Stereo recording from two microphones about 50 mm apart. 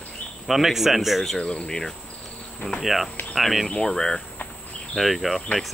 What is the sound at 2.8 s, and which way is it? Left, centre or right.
Speech, centre.